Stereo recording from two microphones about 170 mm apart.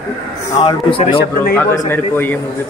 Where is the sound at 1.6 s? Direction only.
10° left (ahead or behind).